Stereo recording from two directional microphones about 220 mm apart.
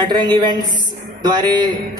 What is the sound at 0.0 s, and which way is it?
A man's voice, 20° right (ahead or behind).